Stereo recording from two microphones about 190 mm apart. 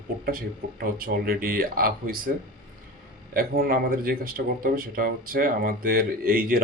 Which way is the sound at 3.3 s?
50° right (ahead or behind).